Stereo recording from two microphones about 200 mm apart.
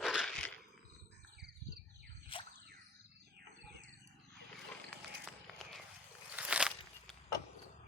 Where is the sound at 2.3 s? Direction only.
25° left (ahead or behind).